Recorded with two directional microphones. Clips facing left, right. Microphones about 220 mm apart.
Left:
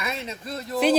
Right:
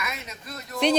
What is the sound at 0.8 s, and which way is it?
Speech, 5° left (ahead or behind).